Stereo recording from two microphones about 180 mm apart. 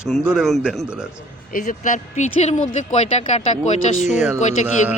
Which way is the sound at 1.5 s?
45° left (ahead or behind).